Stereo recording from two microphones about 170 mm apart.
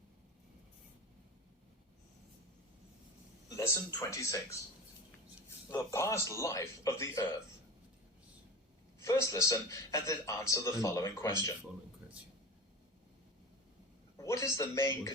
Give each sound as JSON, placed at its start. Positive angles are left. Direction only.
{"t": 3.5, "sound": "speech", "side_deg": 20}
{"t": 5.5, "sound": "speech", "side_deg": 15}
{"t": 9.0, "sound": "a man's voice", "side_deg": 15}
{"t": 14.2, "sound": "a man's voice", "side_deg": 20}